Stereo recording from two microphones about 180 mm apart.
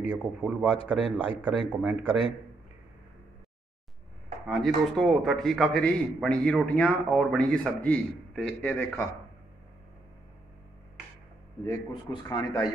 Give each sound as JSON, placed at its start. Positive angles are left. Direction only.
{"t": 0.1, "sound": "a man's voice", "side_deg": -5}
{"t": 4.5, "sound": "a man's voice", "side_deg": 0}
{"t": 11.6, "sound": "a man's voice", "side_deg": 25}